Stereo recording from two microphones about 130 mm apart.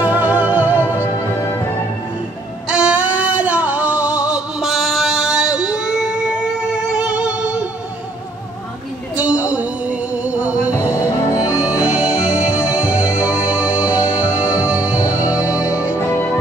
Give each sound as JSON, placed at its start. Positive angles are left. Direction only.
{"t": 0.0, "sound": "music", "side_deg": -10}
{"t": 2.7, "sound": "music", "side_deg": -10}
{"t": 9.1, "sound": "a sound", "side_deg": -10}
{"t": 10.8, "sound": "music", "side_deg": 20}
{"t": 11.4, "sound": "music", "side_deg": -5}
{"t": 16.1, "sound": "music", "side_deg": 15}